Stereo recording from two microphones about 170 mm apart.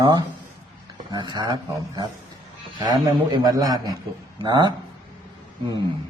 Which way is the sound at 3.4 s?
25° right (ahead or behind).